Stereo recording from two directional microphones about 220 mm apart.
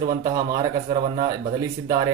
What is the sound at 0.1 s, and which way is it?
Speech, 15° right (ahead or behind).